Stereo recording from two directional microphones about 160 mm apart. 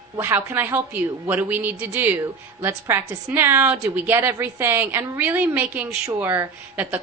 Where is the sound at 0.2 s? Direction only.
15° right (ahead or behind).